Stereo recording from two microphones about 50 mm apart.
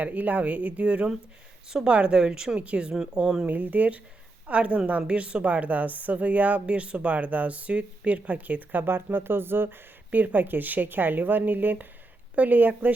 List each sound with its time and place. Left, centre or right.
0.0 s speech: right
3.2 s speech: centre
3.4 s speech: right
8.9 s speech: right